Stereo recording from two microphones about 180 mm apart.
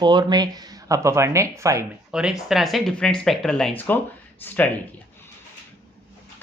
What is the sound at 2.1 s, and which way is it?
Speech, 5° right (ahead or behind).